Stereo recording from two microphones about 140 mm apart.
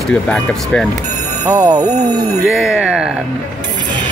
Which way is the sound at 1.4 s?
25° right (ahead or behind).